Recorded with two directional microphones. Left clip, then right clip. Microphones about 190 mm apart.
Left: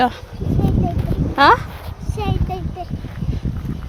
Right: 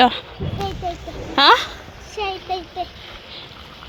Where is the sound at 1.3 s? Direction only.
5° right (ahead or behind).